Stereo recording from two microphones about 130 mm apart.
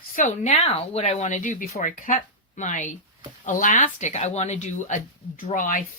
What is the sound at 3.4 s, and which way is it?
A woman's voice, 85° left.